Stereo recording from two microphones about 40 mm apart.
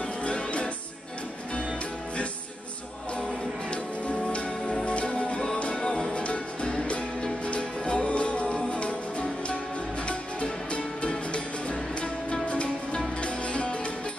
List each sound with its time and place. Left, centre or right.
0.2 s music: left
3.7 s music: left
12.4 s music: left